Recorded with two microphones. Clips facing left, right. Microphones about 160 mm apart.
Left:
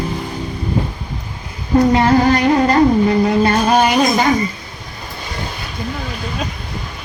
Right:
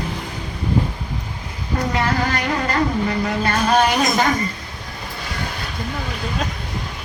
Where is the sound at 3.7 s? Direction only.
5° left (ahead or behind).